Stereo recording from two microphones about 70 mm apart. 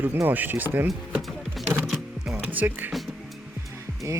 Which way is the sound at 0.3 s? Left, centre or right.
Right.